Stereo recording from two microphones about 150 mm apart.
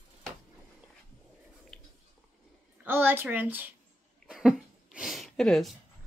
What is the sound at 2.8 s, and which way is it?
Speech, 15° right (ahead or behind).